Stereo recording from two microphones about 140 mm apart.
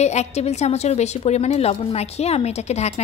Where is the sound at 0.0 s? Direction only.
50° left (ahead or behind).